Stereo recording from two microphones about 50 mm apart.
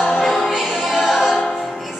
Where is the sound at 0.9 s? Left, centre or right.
Centre.